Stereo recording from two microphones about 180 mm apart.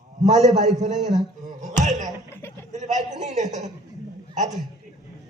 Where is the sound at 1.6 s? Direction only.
40° right (ahead or behind).